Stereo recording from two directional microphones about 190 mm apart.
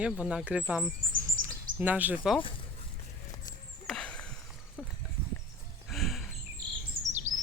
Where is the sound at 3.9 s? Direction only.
5° left (ahead or behind).